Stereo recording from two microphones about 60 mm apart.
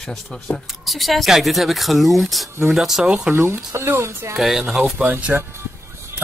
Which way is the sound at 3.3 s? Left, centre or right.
Right.